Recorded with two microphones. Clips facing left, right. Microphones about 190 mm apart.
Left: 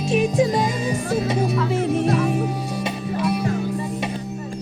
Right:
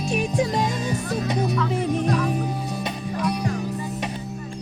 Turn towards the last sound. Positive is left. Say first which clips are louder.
# left 3 dB
turn(degrees=5)  # may be behind; listen again after turning